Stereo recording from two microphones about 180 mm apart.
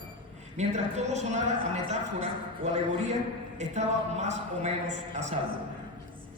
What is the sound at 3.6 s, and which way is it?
A man's voice, 40° right (ahead or behind).